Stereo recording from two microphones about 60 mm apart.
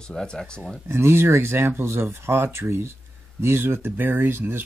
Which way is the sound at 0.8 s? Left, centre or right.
Right.